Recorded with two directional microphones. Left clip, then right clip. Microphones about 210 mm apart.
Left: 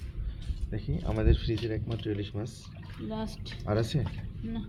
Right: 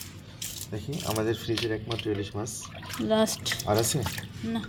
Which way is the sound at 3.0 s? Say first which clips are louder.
Right 14 dB; 55° right (ahead or behind).